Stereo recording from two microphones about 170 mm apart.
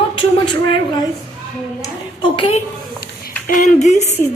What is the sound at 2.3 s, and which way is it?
Speech, 30° left (ahead or behind).